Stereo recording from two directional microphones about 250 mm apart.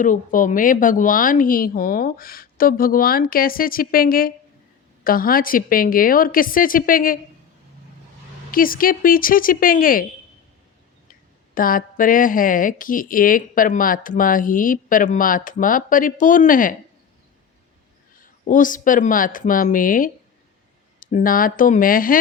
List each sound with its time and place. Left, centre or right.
0.0 s speech: left
8.4 s speech: left
11.1 s speech: left
18.2 s speech: left